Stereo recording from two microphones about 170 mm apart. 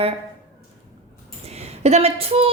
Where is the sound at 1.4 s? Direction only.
40° right (ahead or behind).